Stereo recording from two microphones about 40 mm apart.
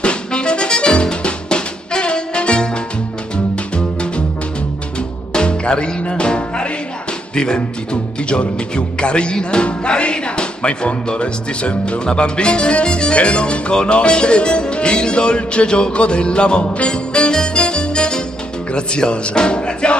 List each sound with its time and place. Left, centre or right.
0.0 s music: left
5.3 s music: left
7.3 s speech: left